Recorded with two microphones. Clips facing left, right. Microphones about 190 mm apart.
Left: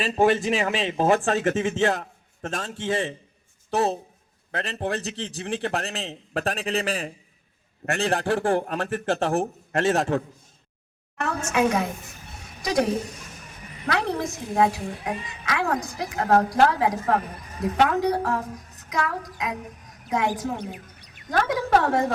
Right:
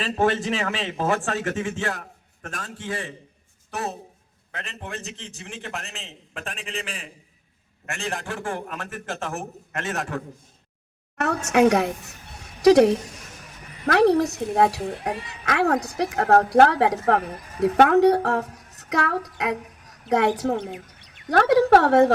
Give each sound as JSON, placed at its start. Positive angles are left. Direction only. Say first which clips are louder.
{"t": 0.0, "sound": "a man's voice", "louder": "left 2 dB", "side_deg": 10}
{"t": 11.2, "sound": "a woman's voice", "louder": "right 5 dB", "side_deg": -70}
{"t": 14.0, "sound": "a woman's voice", "louder": "right 10 dB", "side_deg": -70}